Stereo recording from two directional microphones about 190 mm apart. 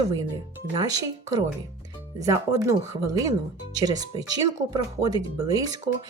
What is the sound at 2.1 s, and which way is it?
Speech, 15° right (ahead or behind).